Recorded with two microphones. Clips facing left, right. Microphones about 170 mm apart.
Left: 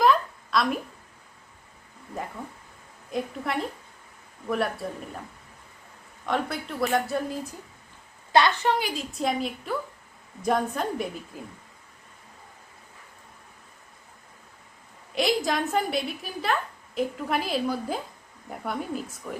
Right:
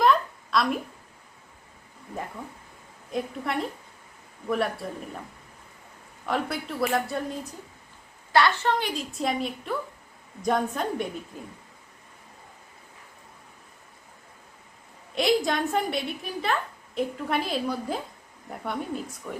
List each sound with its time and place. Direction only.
0.0 s a sound: centre (ahead or behind)
3.1 s a man's voice: centre (ahead or behind)
6.2 s a man's voice: centre (ahead or behind)
8.3 s a woman's voice: 20° left (ahead or behind)
8.8 s a man's voice: centre (ahead or behind)
15.1 s a woman's voice: centre (ahead or behind)